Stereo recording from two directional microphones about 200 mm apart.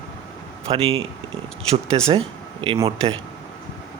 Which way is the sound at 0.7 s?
30° right (ahead or behind).